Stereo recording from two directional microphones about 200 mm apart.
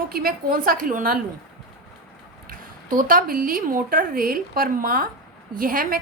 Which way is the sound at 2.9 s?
45° right (ahead or behind).